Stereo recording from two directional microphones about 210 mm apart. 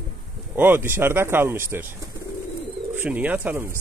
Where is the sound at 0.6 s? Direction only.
10° right (ahead or behind).